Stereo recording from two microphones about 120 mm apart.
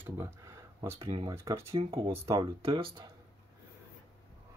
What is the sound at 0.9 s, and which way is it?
Speech, 45° right (ahead or behind).